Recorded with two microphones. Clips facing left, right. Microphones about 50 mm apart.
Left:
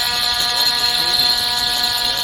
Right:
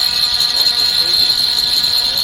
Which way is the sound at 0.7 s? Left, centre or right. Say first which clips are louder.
Right 1 dB; left.